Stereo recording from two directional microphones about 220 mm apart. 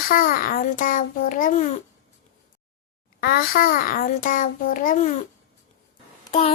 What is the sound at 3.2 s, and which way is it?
A child's voice, 45° left (ahead or behind).